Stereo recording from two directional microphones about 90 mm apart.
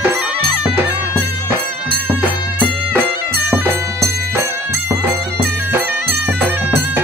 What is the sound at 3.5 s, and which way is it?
Music, 30° right (ahead or behind).